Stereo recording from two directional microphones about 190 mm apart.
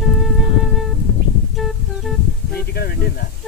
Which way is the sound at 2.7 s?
55° left (ahead or behind).